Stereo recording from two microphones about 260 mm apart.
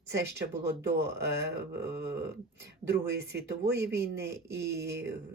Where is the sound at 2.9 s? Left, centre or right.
Right.